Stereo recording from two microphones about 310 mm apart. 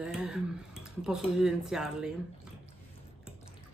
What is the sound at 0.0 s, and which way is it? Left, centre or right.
Speech, centre.